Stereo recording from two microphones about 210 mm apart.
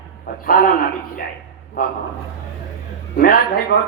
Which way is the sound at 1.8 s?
40° left (ahead or behind).